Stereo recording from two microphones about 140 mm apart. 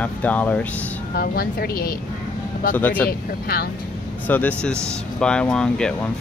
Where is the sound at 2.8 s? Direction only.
10° left (ahead or behind).